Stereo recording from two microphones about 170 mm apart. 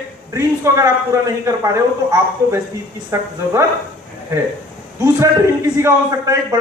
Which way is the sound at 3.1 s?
15° right (ahead or behind).